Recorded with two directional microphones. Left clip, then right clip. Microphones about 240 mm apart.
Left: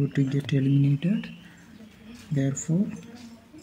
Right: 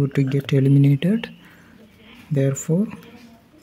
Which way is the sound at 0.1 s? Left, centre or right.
Right.